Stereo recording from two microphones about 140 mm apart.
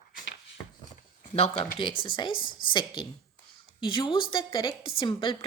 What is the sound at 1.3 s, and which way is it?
A woman's voice, 45° left (ahead or behind).